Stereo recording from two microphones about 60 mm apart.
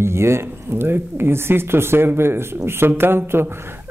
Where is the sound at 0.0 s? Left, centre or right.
Right.